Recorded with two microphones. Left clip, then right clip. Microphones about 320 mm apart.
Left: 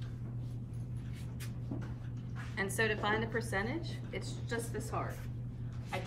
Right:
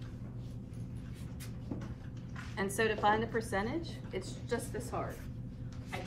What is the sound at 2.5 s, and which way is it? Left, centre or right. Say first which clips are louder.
A woman's voice: right 1 dB; centre.